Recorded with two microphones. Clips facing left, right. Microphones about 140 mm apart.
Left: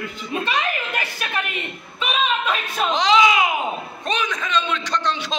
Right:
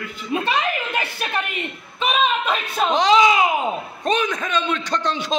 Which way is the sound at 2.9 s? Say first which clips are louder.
Right 2 dB; 45° right (ahead or behind).